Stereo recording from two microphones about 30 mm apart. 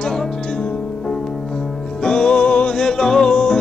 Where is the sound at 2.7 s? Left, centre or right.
Left.